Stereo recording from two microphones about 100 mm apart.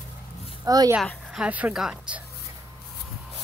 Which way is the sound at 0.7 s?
40° right (ahead or behind).